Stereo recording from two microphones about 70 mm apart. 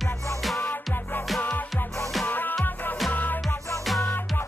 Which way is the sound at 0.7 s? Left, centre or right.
Left.